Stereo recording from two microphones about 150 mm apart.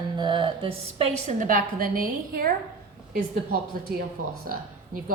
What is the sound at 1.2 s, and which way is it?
A woman's voice, 65° right (ahead or behind).